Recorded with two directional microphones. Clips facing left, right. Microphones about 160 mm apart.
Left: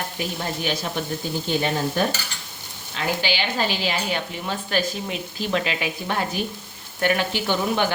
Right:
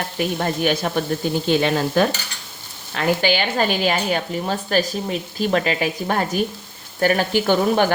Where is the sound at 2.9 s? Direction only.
50° right (ahead or behind).